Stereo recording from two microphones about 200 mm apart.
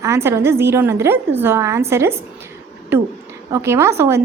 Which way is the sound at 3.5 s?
15° right (ahead or behind).